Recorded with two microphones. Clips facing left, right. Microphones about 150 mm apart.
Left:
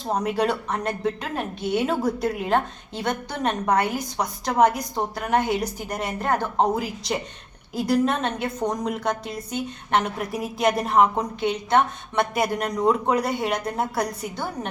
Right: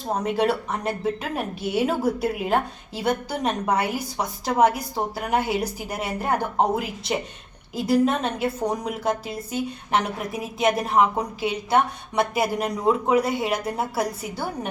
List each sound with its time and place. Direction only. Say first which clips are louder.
0.2 s a woman's voice: right 2 dB; centre (ahead or behind)